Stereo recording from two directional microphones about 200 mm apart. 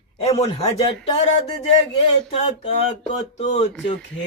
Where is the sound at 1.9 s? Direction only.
30° left (ahead or behind).